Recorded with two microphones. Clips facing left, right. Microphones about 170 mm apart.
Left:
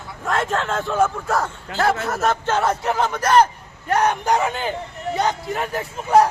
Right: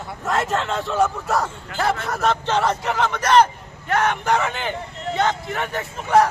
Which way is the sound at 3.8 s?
40° left (ahead or behind).